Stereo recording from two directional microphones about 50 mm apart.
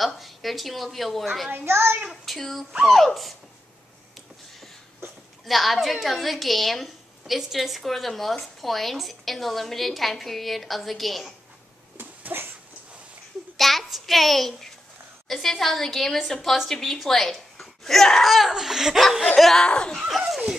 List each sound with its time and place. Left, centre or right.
0.0 s a woman's voice: centre
1.7 s a child's voice: right
2.0 s a woman's voice: centre
5.4 s a woman's voice: centre
12.0 s dog: right
13.6 s a woman's voice: centre
19.3 s a woman's voice: centre
19.6 s a woman's voice: centre
20.0 s a woman's voice: centre